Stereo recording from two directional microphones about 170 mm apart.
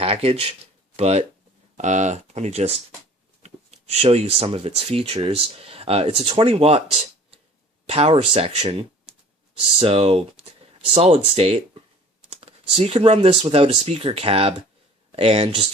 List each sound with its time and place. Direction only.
0.0 s speech: 35° right (ahead or behind)
7.9 s speech: 35° right (ahead or behind)